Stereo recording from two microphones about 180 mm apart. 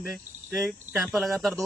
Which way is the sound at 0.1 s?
Centre (ahead or behind).